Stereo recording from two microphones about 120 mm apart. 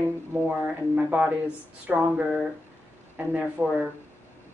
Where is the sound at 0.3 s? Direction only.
15° right (ahead or behind).